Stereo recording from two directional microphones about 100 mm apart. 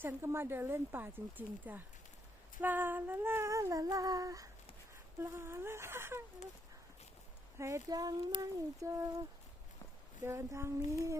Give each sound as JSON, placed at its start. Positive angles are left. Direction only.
{"t": 0.0, "sound": "speech", "side_deg": -25}
{"t": 2.6, "sound": "female singing", "side_deg": -20}
{"t": 5.2, "sound": "speech", "side_deg": -25}
{"t": 7.6, "sound": "female singing", "side_deg": -35}
{"t": 10.2, "sound": "speech", "side_deg": -30}